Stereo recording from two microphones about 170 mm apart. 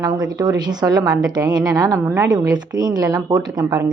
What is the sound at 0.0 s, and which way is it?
A woman's voice, 25° right (ahead or behind).